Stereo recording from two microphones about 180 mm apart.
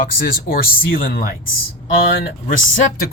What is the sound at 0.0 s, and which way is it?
Speech, 55° left (ahead or behind).